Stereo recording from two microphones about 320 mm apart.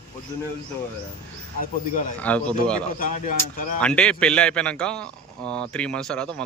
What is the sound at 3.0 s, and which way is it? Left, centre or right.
Speech, left.